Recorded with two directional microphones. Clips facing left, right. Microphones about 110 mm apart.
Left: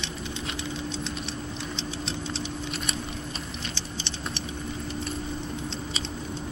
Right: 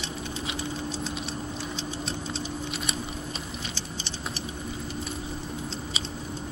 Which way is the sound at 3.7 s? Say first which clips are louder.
Left 1 dB; 40° right (ahead or behind).